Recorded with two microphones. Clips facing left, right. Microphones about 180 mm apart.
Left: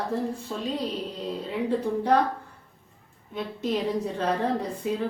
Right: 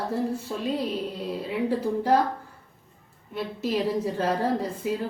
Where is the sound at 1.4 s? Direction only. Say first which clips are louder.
Right 1 dB; 5° right (ahead or behind).